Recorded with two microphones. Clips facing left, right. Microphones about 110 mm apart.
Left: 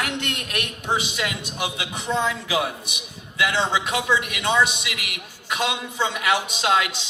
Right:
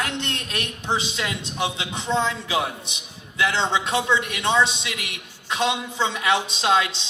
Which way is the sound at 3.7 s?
25° right (ahead or behind).